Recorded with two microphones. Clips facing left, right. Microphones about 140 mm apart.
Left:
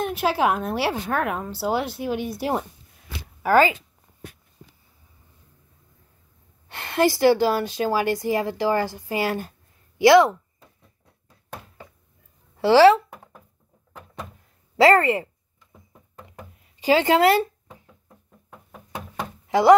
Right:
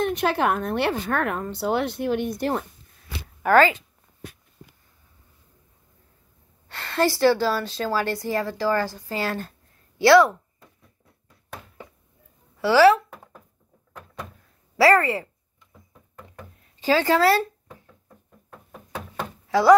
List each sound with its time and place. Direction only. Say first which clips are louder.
0.0 s a woman's voice: even; 5° left (ahead or behind)
6.7 s a woman's voice: left 2 dB; 15° left (ahead or behind)
12.5 s speech: left 2 dB; 25° left (ahead or behind)
14.8 s speech: left 2 dB; 25° left (ahead or behind)
16.3 s a sound: left 1 dB; 15° left (ahead or behind)